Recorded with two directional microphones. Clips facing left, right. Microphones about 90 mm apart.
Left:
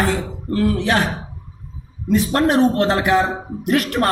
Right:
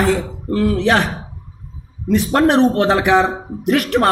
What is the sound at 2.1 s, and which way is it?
Speech, 75° right (ahead or behind).